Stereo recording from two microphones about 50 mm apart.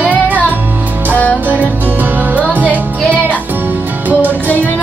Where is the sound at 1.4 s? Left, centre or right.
Right.